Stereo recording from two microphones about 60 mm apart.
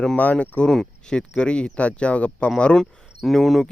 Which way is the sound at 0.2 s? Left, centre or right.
Left.